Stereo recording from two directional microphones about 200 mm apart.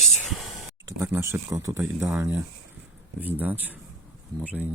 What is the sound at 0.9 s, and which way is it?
Speech, 15° right (ahead or behind).